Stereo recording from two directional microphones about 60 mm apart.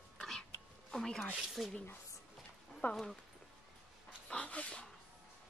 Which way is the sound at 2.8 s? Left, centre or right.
Left.